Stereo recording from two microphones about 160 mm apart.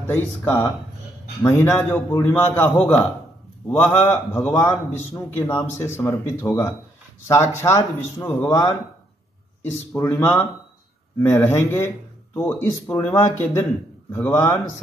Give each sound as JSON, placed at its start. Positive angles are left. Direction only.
{"t": 0.0, "sound": "a man's voice", "side_deg": 15}
{"t": 9.9, "sound": "a man's voice", "side_deg": 15}
{"t": 14.3, "sound": "speech", "side_deg": 20}